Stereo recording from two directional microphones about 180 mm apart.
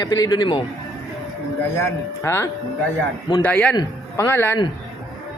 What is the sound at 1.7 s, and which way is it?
A man's voice, 15° left (ahead or behind).